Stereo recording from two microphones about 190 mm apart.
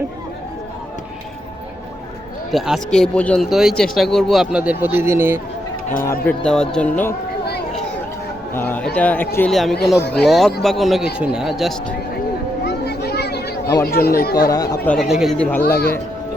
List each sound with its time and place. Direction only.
2.5 s speech: centre (ahead or behind)
6.0 s speech: 10° left (ahead or behind)
8.5 s a sound: 10° left (ahead or behind)
9.0 s speech: 10° left (ahead or behind)
12.6 s children playing: 60° left (ahead or behind)
13.8 s speech: 55° left (ahead or behind)
14.3 s speech: 20° left (ahead or behind)
14.8 s speech: centre (ahead or behind)